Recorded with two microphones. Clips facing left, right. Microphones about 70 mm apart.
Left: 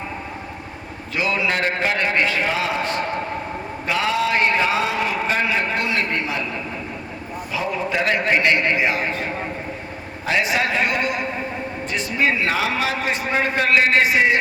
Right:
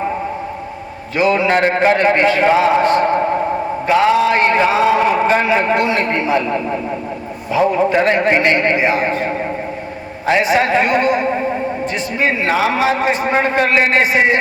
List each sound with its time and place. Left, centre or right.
1.1 s a man's voice: right
5.2 s a man's voice: right
7.9 s a man's voice: right